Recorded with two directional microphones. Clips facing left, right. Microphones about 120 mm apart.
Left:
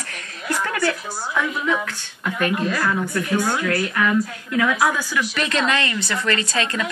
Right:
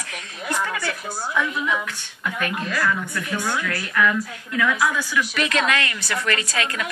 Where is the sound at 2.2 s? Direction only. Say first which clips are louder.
Left 5 dB; 40° left (ahead or behind).